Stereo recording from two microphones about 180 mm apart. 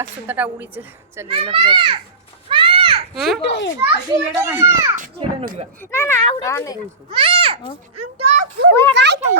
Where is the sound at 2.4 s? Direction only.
30° right (ahead or behind).